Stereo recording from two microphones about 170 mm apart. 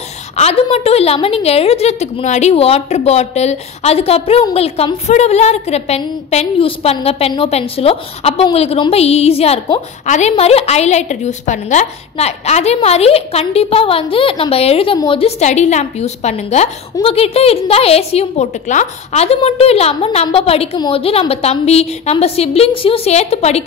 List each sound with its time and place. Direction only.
0.4 s a woman's voice: 35° left (ahead or behind)